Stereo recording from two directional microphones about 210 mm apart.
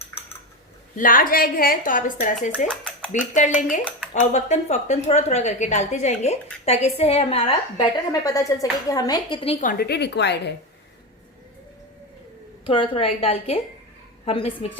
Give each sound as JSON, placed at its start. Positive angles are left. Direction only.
{"t": 0.9, "sound": "a woman's voice", "side_deg": 40}
{"t": 2.6, "sound": "a sound", "side_deg": 5}
{"t": 3.1, "sound": "a woman's voice", "side_deg": 35}
{"t": 8.2, "sound": "a woman's voice", "side_deg": 15}
{"t": 9.6, "sound": "speech", "side_deg": 50}
{"t": 12.6, "sound": "a woman's voice", "side_deg": 25}